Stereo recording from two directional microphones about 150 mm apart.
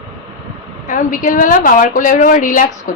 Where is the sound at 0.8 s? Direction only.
60° left (ahead or behind).